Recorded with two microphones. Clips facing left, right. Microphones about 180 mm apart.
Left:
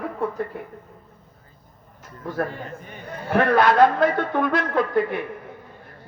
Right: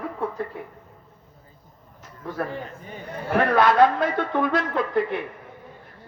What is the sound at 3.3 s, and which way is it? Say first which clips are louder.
A woman's voice: left 1 dB; 50° left (ahead or behind).